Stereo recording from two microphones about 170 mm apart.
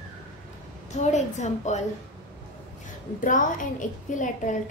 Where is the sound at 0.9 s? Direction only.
45° left (ahead or behind).